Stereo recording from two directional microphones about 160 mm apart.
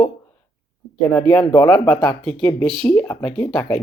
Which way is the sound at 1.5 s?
15° left (ahead or behind).